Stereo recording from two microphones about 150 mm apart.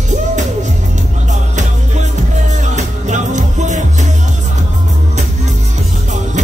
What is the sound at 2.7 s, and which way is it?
Music, 55° right (ahead or behind).